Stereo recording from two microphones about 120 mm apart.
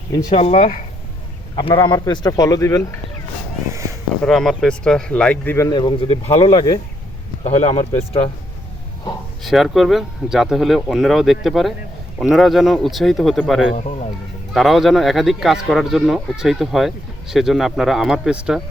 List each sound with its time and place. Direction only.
0.1 s speech: 35° left (ahead or behind)
0.3 s speech: 60° left (ahead or behind)
1.6 s speech: 40° left (ahead or behind)
4.2 s speech: centre (ahead or behind)
5.5 s speech: 25° left (ahead or behind)
5.8 s speech: 45° left (ahead or behind)
7.4 s speech: 65° left (ahead or behind)
9.4 s speech: centre (ahead or behind)
13.7 s speech: 65° left (ahead or behind)
14.5 s speech: centre (ahead or behind)